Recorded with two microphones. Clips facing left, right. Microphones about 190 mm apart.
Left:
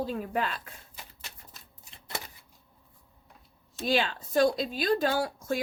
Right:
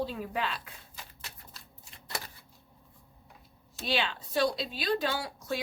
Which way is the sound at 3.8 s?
45° left (ahead or behind).